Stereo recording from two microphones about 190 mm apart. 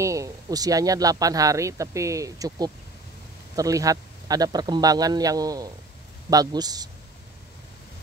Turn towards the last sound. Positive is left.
turn(degrees=-20)  # may be behind; listen again after turning